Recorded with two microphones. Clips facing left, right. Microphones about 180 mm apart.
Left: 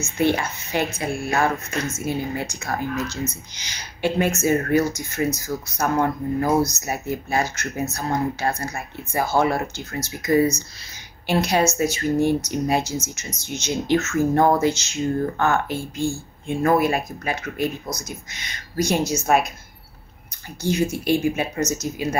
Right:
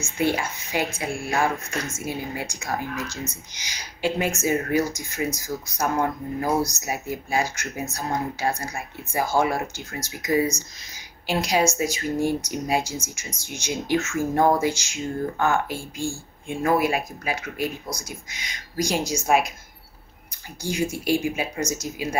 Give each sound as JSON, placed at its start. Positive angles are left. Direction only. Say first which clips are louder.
{"t": 0.4, "sound": "speech", "louder": "left 2 dB", "side_deg": -15}
{"t": 15.7, "sound": "speech", "louder": "left 4 dB", "side_deg": 20}
{"t": 16.4, "sound": "speech", "louder": "left 3 dB", "side_deg": -10}
{"t": 20.6, "sound": "speech", "louder": "left 4 dB", "side_deg": -15}